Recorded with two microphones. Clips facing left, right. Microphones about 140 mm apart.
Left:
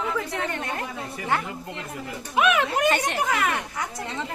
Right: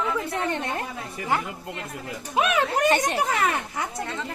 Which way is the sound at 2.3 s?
35° right (ahead or behind).